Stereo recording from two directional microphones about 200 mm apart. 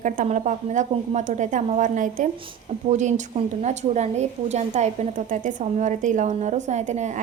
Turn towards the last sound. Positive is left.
turn(degrees=-35)  # may be behind; listen again after turning